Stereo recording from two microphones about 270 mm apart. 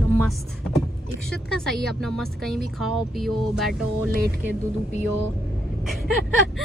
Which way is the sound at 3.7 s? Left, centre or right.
Right.